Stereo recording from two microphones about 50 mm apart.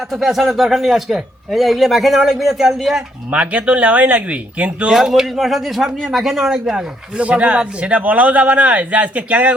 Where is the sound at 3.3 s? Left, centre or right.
Right.